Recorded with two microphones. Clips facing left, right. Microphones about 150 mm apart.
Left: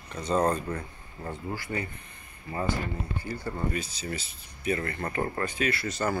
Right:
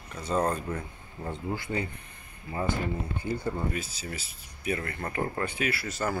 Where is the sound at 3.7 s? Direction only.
5° right (ahead or behind).